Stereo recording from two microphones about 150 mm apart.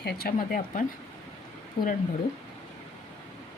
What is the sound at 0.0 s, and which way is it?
Speech, 90° left.